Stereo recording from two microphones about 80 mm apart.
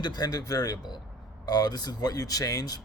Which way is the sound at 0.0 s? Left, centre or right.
Left.